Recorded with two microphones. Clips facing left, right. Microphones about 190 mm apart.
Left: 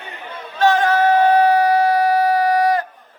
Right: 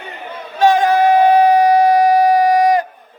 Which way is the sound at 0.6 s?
15° right (ahead or behind).